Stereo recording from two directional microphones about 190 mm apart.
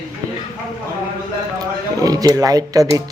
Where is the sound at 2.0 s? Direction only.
20° right (ahead or behind).